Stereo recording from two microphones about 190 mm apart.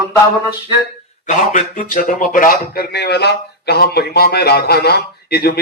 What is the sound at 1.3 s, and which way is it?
Speech, 40° left (ahead or behind).